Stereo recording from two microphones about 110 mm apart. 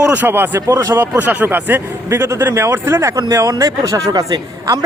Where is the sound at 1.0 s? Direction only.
15° right (ahead or behind).